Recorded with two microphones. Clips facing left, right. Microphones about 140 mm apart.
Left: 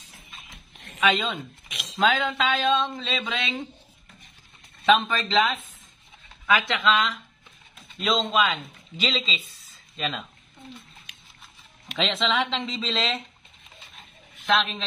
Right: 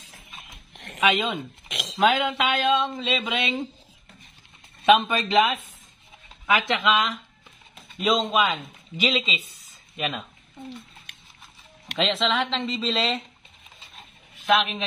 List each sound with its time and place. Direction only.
0.7 s a sound: 80° right
1.0 s speech: 15° right (ahead or behind)
1.7 s a sound: 90° right
2.0 s speech: 15° right (ahead or behind)
4.8 s speech: 15° right (ahead or behind)
11.1 s music: 60° right (ahead or behind)
12.0 s speech: centre (ahead or behind)
14.4 s a man's voice: 10° right (ahead or behind)